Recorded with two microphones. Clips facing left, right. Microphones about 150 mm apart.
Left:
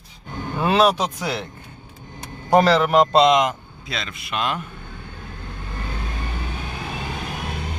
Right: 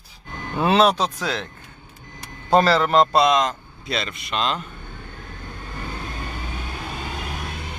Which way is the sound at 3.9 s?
Centre (ahead or behind).